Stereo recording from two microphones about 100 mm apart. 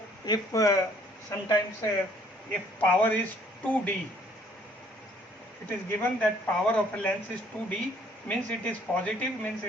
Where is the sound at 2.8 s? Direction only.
15° left (ahead or behind).